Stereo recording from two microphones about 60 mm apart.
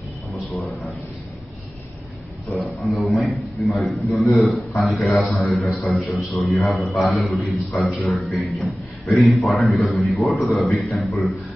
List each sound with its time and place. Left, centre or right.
2.6 s a man's voice: centre
5.2 s a man's voice: left
5.9 s a man's voice: centre